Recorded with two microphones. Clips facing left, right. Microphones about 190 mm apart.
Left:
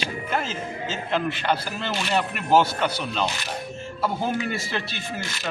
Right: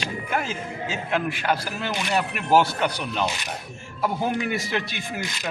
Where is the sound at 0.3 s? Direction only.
10° right (ahead or behind).